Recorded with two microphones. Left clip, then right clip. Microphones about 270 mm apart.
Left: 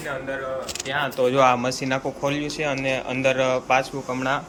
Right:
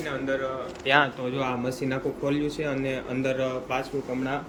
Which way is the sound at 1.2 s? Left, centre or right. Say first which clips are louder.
Left 12 dB; centre.